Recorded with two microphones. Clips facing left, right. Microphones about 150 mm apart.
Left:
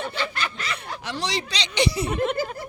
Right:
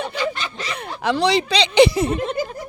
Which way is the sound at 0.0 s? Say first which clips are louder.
Right 4 dB; 20° right (ahead or behind).